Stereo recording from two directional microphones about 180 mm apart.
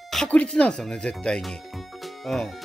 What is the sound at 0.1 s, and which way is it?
Speech, 5° left (ahead or behind).